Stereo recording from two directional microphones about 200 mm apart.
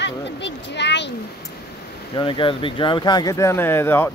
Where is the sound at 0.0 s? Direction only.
60° left (ahead or behind).